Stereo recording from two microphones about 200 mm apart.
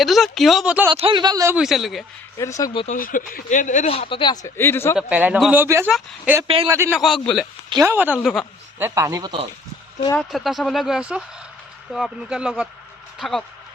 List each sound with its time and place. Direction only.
0.0 s speech: centre (ahead or behind)
0.9 s speech: 25° right (ahead or behind)
1.5 s speech: centre (ahead or behind)
2.4 s speech: 15° left (ahead or behind)
2.8 s speech: 40° left (ahead or behind); by 4.9 s 10° left (ahead or behind)
4.9 s speech: 5° right (ahead or behind)
6.9 s speech: centre (ahead or behind)
7.7 s speech: 15° right (ahead or behind)
10.2 s speech: centre (ahead or behind)